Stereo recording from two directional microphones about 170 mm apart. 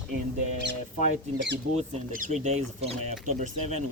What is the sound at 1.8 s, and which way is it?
Speech, 45° right (ahead or behind).